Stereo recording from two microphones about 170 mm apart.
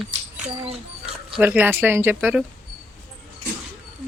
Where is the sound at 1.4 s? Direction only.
10° right (ahead or behind).